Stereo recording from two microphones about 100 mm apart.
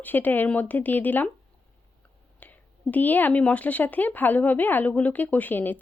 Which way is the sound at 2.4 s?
15° left (ahead or behind).